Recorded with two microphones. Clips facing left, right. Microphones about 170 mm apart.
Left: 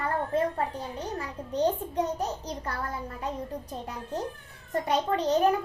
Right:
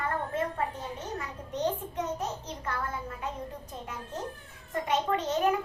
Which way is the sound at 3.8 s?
35° left (ahead or behind).